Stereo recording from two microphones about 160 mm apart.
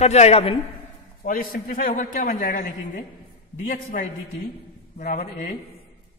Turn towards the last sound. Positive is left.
turn(degrees=55)  # may be behind; listen again after turning